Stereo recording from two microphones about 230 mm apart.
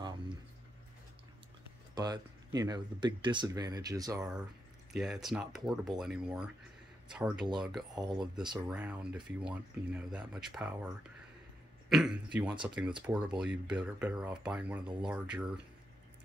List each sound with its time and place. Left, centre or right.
2.0 s speech: centre
4.9 s speech: centre
8.2 s speech: centre
8.6 s speech: centre
11.9 s speech: centre